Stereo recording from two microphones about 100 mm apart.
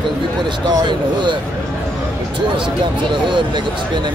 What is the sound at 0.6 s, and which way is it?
Speech, 50° right (ahead or behind).